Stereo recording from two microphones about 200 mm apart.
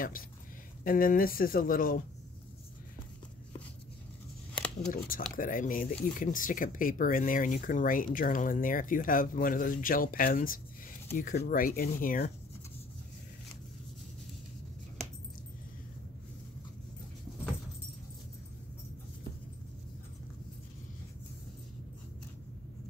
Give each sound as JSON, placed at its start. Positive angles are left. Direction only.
{"t": 0.8, "sound": "speech", "side_deg": 45}
{"t": 4.6, "sound": "shuffling cards", "side_deg": 5}
{"t": 4.9, "sound": "speech", "side_deg": 45}